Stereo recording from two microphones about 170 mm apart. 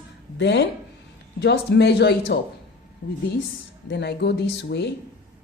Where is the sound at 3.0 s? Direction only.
90° left.